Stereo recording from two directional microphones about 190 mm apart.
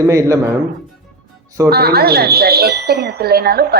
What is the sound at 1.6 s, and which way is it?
Speech, 55° right (ahead or behind).